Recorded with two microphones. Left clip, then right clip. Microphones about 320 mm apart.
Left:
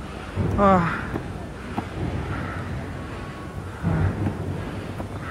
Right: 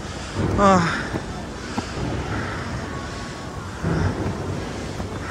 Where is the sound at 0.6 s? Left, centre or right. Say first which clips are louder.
Right 2 dB; centre.